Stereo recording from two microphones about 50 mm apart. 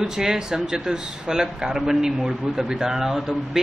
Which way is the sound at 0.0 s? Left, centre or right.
Centre.